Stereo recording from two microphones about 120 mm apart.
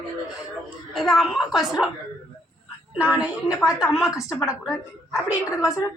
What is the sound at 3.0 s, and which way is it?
A woman's voice, 10° right (ahead or behind).